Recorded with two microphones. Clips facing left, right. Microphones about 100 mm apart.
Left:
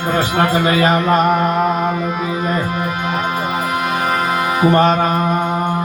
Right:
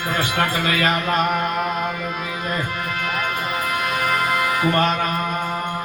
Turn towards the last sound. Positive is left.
turn(degrees=30)  # may be behind; listen again after turning